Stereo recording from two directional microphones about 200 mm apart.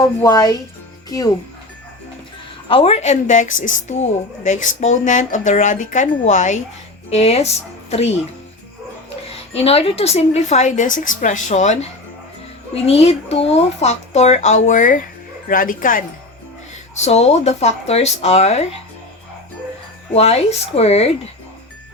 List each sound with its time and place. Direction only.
0.0 s speech: 15° left (ahead or behind)
2.6 s speech: 30° left (ahead or behind)
9.6 s speech: 30° left (ahead or behind)
20.1 s speech: 30° left (ahead or behind)